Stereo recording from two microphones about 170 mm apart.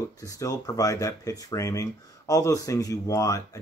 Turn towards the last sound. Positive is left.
turn(degrees=20)  # may be behind; listen again after turning